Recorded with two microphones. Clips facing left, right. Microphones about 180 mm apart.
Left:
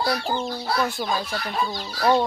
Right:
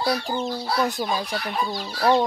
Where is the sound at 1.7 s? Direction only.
5° right (ahead or behind).